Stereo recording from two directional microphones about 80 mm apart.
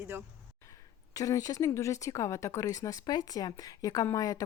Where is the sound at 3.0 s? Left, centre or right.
Left.